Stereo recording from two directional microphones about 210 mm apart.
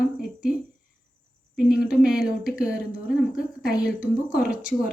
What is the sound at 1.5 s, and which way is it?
Speech, 5° right (ahead or behind).